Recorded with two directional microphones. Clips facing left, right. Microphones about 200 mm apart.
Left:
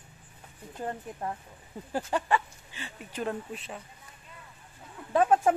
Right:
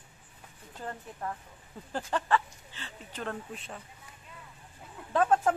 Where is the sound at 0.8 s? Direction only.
25° left (ahead or behind).